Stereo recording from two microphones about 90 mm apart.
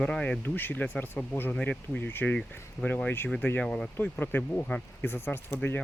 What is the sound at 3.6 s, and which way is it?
Speech, 10° left (ahead or behind).